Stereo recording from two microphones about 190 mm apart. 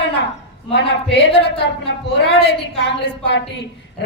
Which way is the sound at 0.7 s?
65° left (ahead or behind).